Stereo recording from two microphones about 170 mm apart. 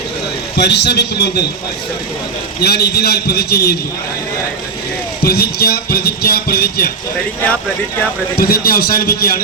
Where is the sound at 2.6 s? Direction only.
70° left (ahead or behind).